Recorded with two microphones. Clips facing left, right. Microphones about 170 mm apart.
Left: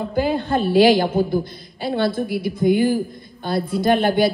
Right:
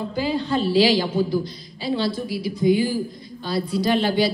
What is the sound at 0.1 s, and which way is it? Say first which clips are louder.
A woman's voice: left 3 dB; 55° left (ahead or behind).